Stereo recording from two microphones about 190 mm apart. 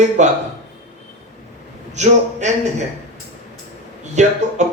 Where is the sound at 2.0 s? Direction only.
40° right (ahead or behind).